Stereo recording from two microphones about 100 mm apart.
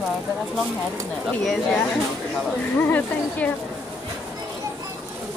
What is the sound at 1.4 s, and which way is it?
Speech, centre (ahead or behind).